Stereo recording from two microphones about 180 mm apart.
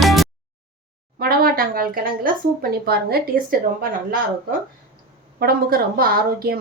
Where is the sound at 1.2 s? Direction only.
55° right (ahead or behind).